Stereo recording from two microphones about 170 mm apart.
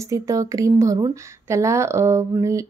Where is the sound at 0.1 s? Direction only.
20° right (ahead or behind).